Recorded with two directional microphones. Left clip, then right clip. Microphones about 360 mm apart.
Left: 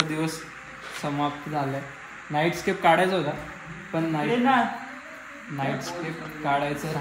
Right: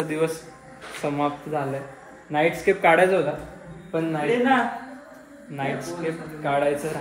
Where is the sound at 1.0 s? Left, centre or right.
Centre.